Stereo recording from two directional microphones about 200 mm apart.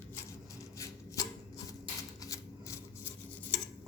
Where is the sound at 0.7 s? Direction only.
15° left (ahead or behind).